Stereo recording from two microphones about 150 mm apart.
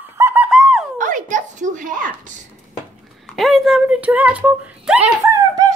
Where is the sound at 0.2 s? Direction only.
10° right (ahead or behind).